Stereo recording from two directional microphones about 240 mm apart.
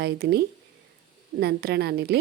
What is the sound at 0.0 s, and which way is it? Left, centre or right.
Speech, right.